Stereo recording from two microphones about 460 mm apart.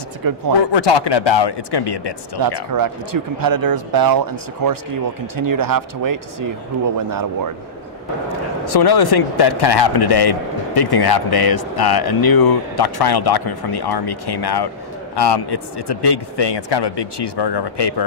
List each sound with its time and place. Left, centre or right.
0.2 s speech: right
0.7 s speech: left
2.4 s speech: right
8.7 s a man's voice: left